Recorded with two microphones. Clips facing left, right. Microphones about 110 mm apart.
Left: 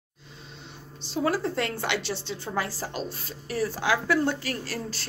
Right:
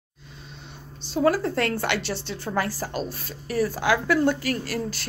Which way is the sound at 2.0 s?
20° left (ahead or behind).